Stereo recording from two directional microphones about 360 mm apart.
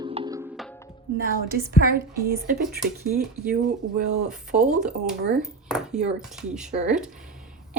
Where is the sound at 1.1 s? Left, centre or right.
Right.